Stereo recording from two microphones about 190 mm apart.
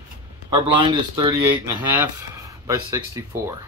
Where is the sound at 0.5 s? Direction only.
25° right (ahead or behind).